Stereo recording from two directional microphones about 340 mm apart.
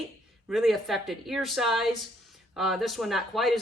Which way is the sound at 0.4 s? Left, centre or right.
Centre.